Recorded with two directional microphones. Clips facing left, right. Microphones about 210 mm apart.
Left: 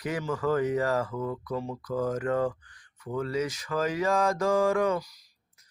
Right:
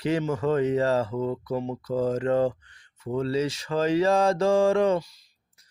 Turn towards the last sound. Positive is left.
turn(degrees=-25)  # may be behind; listen again after turning